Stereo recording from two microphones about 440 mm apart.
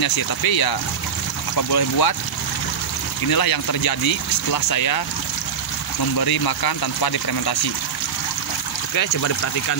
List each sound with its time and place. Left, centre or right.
0.0 s speech: left
3.3 s speech: left
6.1 s speech: left
8.9 s speech: left